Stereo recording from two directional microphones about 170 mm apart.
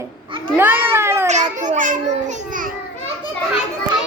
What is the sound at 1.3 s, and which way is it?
Speech, 45° right (ahead or behind).